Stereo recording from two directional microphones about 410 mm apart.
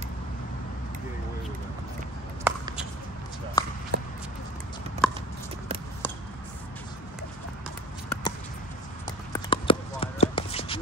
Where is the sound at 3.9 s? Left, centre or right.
Right.